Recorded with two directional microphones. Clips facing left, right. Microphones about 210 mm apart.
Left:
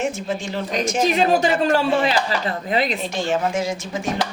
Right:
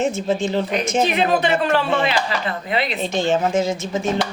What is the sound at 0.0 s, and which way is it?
Speech, 20° right (ahead or behind).